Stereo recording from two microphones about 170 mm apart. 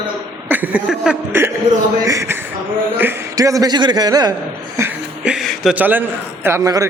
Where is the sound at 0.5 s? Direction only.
10° right (ahead or behind).